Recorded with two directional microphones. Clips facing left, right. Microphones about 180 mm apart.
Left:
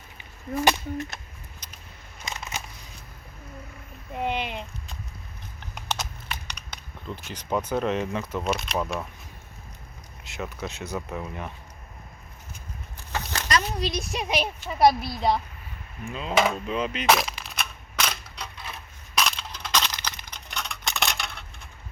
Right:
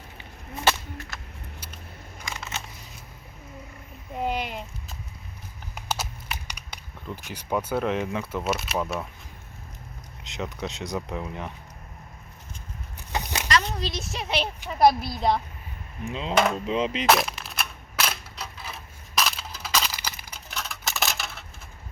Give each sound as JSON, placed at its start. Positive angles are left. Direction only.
{"t": 0.2, "sound": "speech", "side_deg": 15}
{"t": 2.2, "sound": "scissors", "side_deg": 20}
{"t": 4.3, "sound": "a sound", "side_deg": -40}
{"t": 5.7, "sound": "crumpling", "side_deg": -10}
{"t": 7.9, "sound": "speech", "side_deg": -15}
{"t": 10.2, "sound": "speech", "side_deg": -20}
{"t": 13.1, "sound": "a sound", "side_deg": -15}
{"t": 14.0, "sound": "speech", "side_deg": 15}
{"t": 14.7, "sound": "speech", "side_deg": 0}
{"t": 16.0, "sound": "speech", "side_deg": -20}
{"t": 16.3, "sound": "speech", "side_deg": 0}
{"t": 16.6, "sound": "speech", "side_deg": -25}
{"t": 17.1, "sound": "crushing", "side_deg": 0}